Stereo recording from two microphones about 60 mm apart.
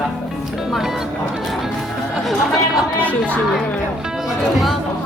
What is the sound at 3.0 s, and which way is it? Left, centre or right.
Speech, left.